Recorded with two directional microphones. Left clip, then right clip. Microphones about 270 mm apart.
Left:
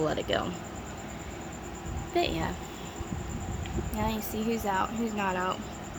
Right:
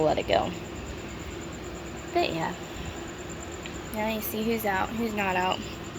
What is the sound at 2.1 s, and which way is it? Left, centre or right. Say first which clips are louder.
Speech: right 2 dB; centre.